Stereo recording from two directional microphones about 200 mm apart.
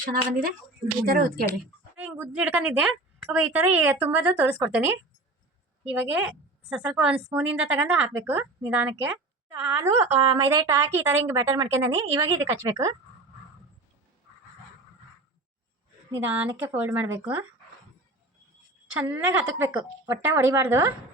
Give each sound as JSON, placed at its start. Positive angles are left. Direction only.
{"t": 1.0, "sound": "speech", "side_deg": -50}
{"t": 2.0, "sound": "a woman's voice", "side_deg": -10}
{"t": 6.0, "sound": "a woman's voice", "side_deg": -5}
{"t": 16.1, "sound": "a woman's voice", "side_deg": -10}
{"t": 18.9, "sound": "a woman's voice", "side_deg": -10}